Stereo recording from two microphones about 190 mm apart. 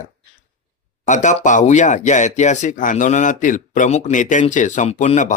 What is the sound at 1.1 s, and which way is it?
Speech, 40° left (ahead or behind).